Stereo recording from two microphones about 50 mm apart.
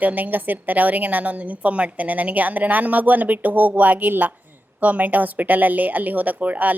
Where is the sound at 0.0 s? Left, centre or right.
Right.